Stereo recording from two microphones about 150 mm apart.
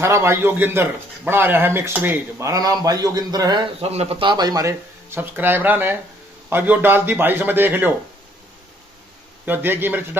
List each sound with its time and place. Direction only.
0.0 s a man's voice: 20° right (ahead or behind)
3.8 s a man's voice: 45° right (ahead or behind); by 7.9 s 15° right (ahead or behind)
9.5 s a man's voice: 15° right (ahead or behind)